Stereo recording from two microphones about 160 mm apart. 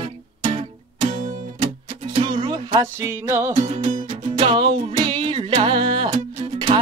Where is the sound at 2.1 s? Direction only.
40° right (ahead or behind); by 3.6 s 15° right (ahead or behind).